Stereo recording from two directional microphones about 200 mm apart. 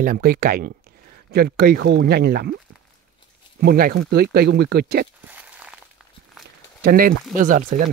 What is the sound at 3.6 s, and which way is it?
Speech, 50° right (ahead or behind).